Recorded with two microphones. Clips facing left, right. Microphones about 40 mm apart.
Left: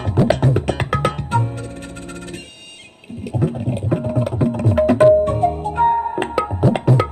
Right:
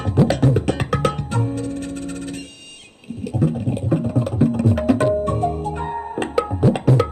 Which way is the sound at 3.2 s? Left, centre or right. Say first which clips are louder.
Even; left.